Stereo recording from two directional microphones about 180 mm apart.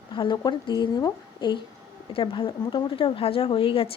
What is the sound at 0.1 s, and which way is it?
Speech, 25° left (ahead or behind).